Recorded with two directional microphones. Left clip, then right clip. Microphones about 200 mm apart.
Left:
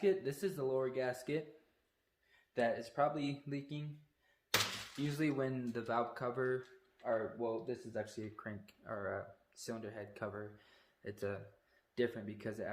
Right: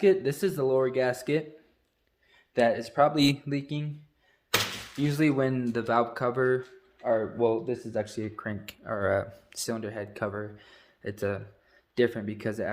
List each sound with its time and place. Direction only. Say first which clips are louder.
0.0 s speech: right 11 dB; 50° right (ahead or behind)
2.6 s speech: right 12 dB; 50° right (ahead or behind)
5.0 s speech: right 12 dB; 45° right (ahead or behind)